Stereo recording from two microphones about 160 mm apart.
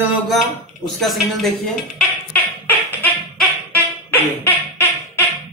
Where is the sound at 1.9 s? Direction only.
10° left (ahead or behind).